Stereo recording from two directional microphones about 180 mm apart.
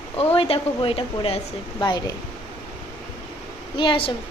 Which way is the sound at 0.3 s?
30° left (ahead or behind).